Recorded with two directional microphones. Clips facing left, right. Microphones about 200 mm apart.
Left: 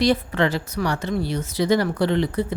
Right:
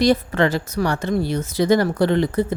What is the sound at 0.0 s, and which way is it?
A woman's voice, 45° right (ahead or behind).